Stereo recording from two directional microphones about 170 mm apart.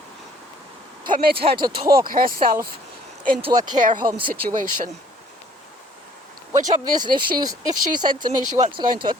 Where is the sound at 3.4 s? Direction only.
35° right (ahead or behind).